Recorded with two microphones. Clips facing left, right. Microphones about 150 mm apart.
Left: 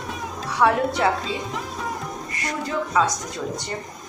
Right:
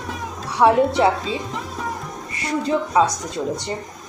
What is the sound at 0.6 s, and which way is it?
Speech, 25° right (ahead or behind).